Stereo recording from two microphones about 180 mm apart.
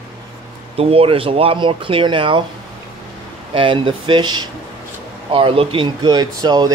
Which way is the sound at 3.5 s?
30° right (ahead or behind).